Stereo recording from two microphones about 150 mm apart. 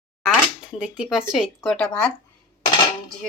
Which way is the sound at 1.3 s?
Centre (ahead or behind).